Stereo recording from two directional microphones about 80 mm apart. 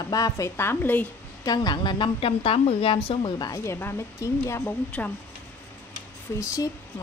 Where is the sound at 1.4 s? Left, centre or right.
Left.